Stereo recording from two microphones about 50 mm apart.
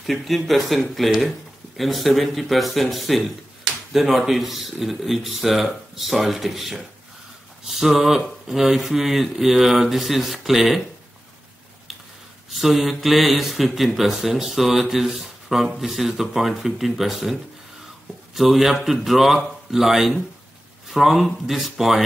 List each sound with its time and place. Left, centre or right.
0.0 s speech: centre
12.4 s speech: centre